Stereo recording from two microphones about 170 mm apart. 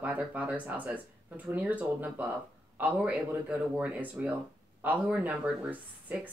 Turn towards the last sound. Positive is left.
turn(degrees=-10)  # may be behind; listen again after turning